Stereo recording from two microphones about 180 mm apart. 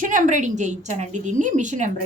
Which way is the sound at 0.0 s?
45° right (ahead or behind).